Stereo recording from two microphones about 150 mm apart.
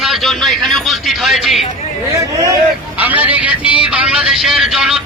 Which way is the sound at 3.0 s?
10° right (ahead or behind).